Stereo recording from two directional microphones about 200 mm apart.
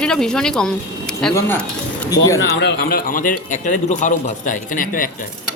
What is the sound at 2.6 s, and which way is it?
A man's voice, 50° left (ahead or behind).